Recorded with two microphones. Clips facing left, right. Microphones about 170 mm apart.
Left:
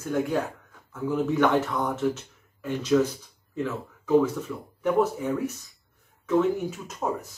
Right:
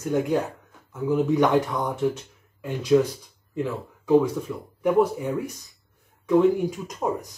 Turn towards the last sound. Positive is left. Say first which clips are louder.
# right 3 dB
turn(degrees=-15)  # may be behind; listen again after turning